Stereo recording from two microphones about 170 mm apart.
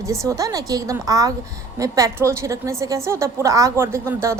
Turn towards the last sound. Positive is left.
turn(degrees=-15)  # may be behind; listen again after turning